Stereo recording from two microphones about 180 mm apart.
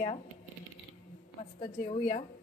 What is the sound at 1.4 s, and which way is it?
Speech, 35° left (ahead or behind).